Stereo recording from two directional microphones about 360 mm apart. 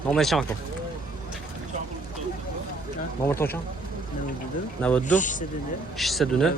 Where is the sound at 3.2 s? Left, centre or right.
Centre.